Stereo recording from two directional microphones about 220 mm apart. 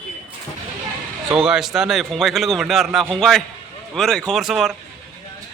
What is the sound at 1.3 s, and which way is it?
A man's voice, 5° right (ahead or behind).